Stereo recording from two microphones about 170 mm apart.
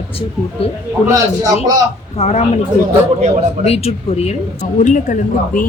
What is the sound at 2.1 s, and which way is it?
Speech, 40° left (ahead or behind).